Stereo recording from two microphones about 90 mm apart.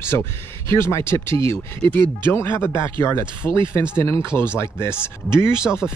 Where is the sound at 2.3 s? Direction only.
25° left (ahead or behind).